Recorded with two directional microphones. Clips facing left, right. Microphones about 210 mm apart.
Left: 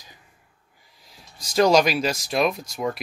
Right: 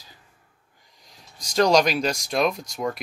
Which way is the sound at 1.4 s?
5° left (ahead or behind).